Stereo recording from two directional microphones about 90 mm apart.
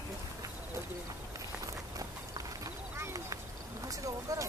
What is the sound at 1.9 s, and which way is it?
Clip-clop, 40° right (ahead or behind).